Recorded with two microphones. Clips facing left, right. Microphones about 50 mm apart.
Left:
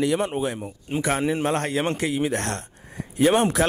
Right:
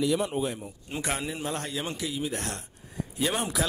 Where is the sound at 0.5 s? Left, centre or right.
Left.